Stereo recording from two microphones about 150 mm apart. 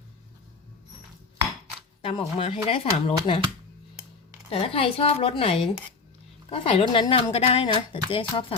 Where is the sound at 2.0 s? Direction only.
40° left (ahead or behind).